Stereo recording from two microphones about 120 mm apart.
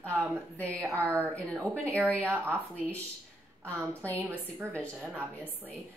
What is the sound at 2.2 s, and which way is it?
Speech, 20° right (ahead or behind).